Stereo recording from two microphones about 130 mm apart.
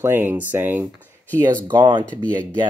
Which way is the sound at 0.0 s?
15° right (ahead or behind).